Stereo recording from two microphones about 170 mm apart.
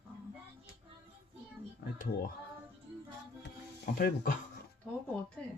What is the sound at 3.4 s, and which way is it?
Music, 65° left (ahead or behind).